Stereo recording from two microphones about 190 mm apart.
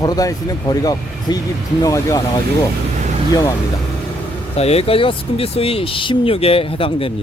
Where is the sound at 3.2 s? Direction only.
20° left (ahead or behind).